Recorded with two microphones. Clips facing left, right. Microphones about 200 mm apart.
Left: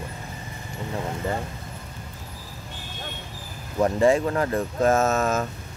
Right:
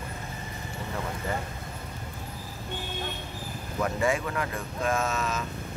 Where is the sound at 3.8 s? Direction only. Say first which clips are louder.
Left 8 dB; 35° left (ahead or behind).